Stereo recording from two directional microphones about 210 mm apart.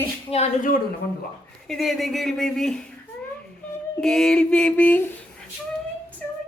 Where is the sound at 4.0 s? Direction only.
Centre (ahead or behind).